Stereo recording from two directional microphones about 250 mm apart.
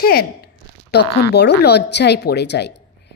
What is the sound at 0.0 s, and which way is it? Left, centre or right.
A woman's voice, left.